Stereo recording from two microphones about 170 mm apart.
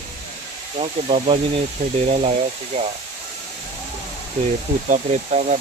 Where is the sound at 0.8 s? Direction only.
35° right (ahead or behind).